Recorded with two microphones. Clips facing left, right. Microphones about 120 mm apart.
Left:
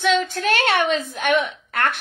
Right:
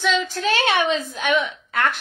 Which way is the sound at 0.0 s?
55° left (ahead or behind).